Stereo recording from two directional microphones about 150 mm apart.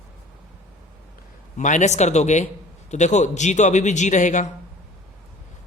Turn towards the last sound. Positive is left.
turn(degrees=55)  # may be behind; listen again after turning